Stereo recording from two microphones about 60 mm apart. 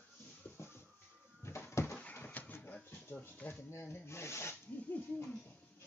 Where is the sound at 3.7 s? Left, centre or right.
Left.